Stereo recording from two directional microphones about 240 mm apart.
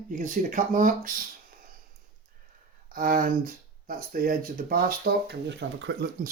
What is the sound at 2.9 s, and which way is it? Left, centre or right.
Speech, right.